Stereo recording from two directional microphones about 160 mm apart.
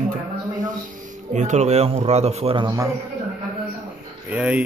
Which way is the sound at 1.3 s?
50° right (ahead or behind).